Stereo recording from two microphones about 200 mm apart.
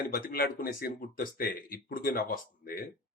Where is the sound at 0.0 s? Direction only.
45° left (ahead or behind).